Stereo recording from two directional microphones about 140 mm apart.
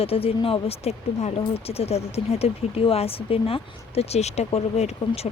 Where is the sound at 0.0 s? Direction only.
45° left (ahead or behind).